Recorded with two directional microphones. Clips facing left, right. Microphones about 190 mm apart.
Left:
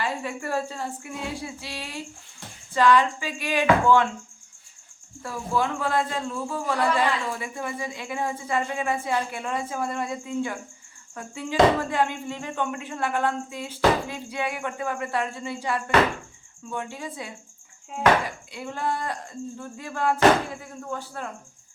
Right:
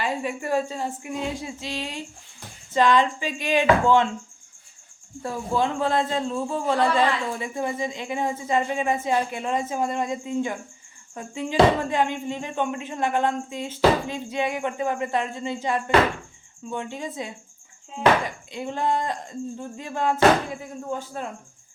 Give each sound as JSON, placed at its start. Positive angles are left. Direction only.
{"t": 0.0, "sound": "speech", "side_deg": -15}
{"t": 5.2, "sound": "speech", "side_deg": -25}
{"t": 18.5, "sound": "speech", "side_deg": -20}